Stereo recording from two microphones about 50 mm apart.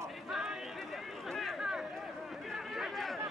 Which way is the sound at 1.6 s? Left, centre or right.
Centre.